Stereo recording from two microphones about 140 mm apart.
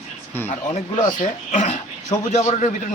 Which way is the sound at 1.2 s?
60° left (ahead or behind).